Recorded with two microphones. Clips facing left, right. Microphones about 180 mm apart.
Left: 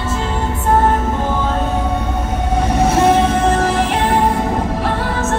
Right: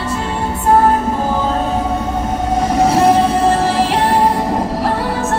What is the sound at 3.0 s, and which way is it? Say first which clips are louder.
Music: right 1 dB; 35° right (ahead or behind).